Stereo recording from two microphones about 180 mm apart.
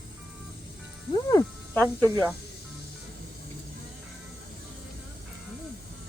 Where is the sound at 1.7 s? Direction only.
10° left (ahead or behind).